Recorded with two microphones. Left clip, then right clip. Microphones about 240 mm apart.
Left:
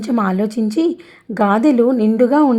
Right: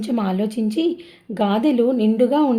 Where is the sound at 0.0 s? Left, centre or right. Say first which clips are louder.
Left 5 dB; centre.